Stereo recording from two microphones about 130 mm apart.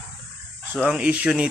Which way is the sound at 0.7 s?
10° right (ahead or behind).